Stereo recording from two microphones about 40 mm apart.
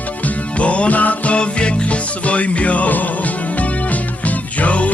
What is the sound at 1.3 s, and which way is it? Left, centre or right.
Music, left.